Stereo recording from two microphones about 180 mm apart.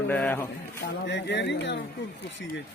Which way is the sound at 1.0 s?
80° left.